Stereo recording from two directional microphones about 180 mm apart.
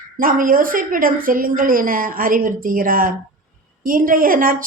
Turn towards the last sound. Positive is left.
turn(degrees=-50)  # may be behind; listen again after turning